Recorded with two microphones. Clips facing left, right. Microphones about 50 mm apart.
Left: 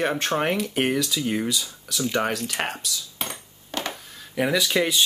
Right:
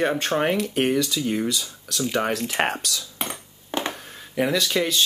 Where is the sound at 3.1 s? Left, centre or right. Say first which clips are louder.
Right 2 dB; right.